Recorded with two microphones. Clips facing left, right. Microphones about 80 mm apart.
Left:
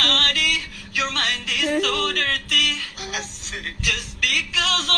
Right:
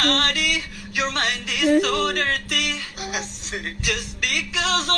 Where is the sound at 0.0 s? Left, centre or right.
Centre.